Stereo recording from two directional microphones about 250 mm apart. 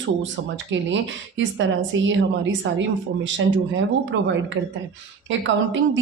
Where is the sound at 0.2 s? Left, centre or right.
Right.